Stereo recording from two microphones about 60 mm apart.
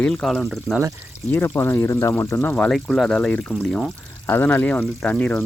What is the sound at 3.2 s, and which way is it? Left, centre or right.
Speech, centre.